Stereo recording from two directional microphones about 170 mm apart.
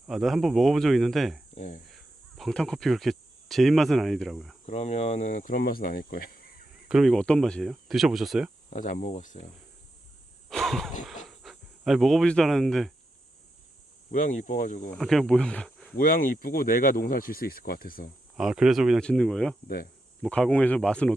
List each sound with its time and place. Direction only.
0.1 s speech: centre (ahead or behind)
1.5 s speech: 45° left (ahead or behind)
1.9 s speech: centre (ahead or behind)
4.6 s speech: 40° left (ahead or behind); by 6.7 s 60° left (ahead or behind)
6.8 s speech: centre (ahead or behind)
8.7 s speech: 50° left (ahead or behind)
10.5 s a sound: centre (ahead or behind)
11.3 s speech: centre (ahead or behind)
14.1 s speech: 50° left (ahead or behind)
14.9 s speech: centre (ahead or behind)
16.0 s speech: 55° left (ahead or behind)
18.3 s speech: 5° right (ahead or behind)
19.6 s speech: 60° left (ahead or behind)
20.2 s speech: 5° left (ahead or behind)